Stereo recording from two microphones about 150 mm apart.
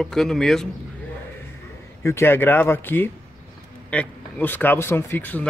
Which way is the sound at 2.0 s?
15° left (ahead or behind).